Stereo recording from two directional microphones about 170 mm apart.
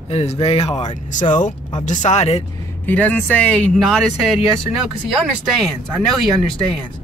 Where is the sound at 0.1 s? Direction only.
35° left (ahead or behind).